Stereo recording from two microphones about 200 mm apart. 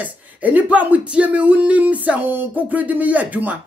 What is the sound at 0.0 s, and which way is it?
Speech, 10° right (ahead or behind).